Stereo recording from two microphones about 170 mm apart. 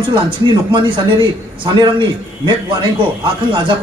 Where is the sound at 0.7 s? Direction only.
30° right (ahead or behind).